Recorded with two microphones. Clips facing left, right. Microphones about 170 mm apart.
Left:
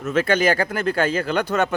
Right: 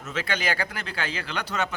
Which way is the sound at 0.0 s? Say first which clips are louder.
Left 11 dB; 50° left (ahead or behind).